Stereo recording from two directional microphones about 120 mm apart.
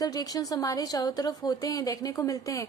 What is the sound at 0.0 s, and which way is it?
A woman's voice, 30° left (ahead or behind).